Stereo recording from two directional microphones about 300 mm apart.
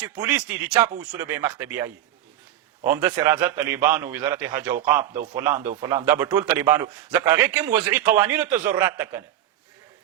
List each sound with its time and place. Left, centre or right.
0.2 s a man's voice: centre